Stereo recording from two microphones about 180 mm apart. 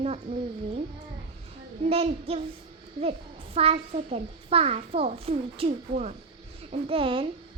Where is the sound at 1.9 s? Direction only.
35° right (ahead or behind).